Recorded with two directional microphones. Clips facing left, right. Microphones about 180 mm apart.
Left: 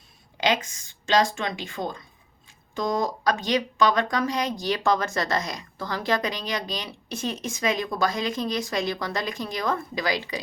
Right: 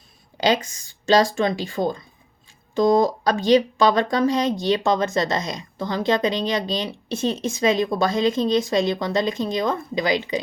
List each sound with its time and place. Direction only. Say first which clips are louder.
0.3 s speech: right 4 dB; 35° right (ahead or behind)